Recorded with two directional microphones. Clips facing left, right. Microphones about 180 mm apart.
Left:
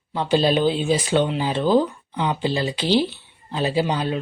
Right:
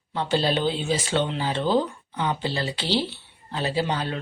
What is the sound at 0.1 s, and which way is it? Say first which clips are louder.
Speech: left 4 dB; 15° left (ahead or behind).